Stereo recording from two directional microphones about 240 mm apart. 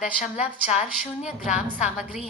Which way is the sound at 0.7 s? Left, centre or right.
Left.